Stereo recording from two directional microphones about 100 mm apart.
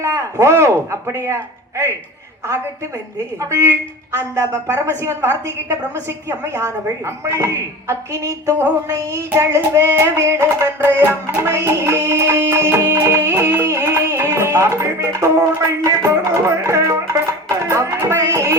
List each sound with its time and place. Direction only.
0.0 s a woman's voice: 30° right (ahead or behind)
4.1 s a woman's voice: 30° right (ahead or behind)
8.9 s female singing: 35° right (ahead or behind)
9.3 s a woman's voice: 30° right (ahead or behind)
11.3 s music: 25° right (ahead or behind)